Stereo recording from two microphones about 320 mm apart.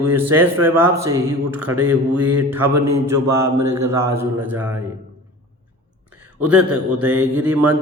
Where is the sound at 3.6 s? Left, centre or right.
Right.